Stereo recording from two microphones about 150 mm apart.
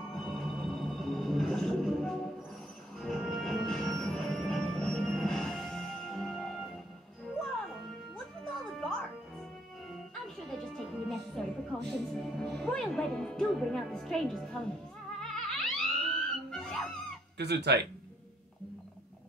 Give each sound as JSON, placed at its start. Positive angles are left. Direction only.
{"t": 0.1, "sound": "music", "side_deg": 0}
{"t": 10.2, "sound": "music", "side_deg": 0}
{"t": 17.4, "sound": "speech", "side_deg": -90}